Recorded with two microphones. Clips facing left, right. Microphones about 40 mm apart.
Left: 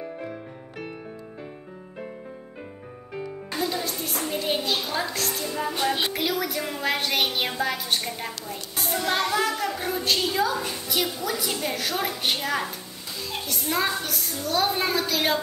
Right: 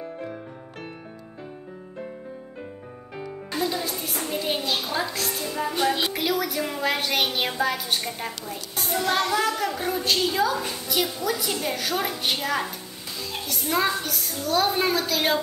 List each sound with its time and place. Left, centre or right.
0.0 s music: centre
3.2 s a woman's voice: centre